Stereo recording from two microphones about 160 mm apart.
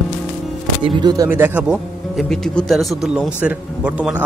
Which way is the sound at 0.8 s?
25° right (ahead or behind).